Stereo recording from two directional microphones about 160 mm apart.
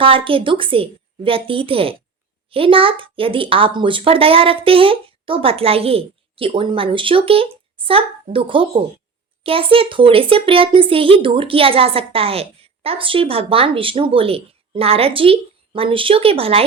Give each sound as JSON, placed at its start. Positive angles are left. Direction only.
{"t": 0.0, "sound": "speech", "side_deg": -35}